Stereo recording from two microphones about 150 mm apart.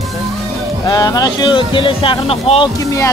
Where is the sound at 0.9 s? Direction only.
25° left (ahead or behind).